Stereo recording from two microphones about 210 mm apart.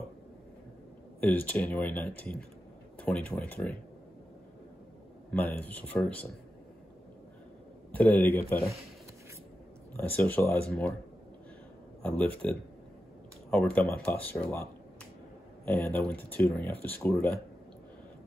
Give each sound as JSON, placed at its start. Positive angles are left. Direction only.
{"t": 1.2, "sound": "speech", "side_deg": 5}
{"t": 5.3, "sound": "speech", "side_deg": 10}
{"t": 7.9, "sound": "speech", "side_deg": 5}
{"t": 9.9, "sound": "speech", "side_deg": 10}
{"t": 12.0, "sound": "speech", "side_deg": 5}